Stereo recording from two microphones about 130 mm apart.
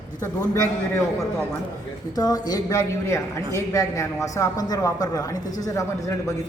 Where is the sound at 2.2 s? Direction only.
30° left (ahead or behind).